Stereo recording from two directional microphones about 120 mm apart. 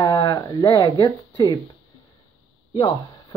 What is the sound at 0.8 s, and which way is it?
Speech, 40° left (ahead or behind).